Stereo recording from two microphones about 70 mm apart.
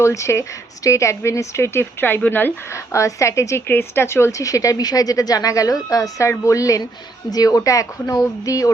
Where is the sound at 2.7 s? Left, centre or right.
Left.